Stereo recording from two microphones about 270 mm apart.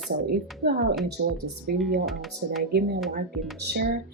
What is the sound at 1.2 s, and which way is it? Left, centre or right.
Speech, right.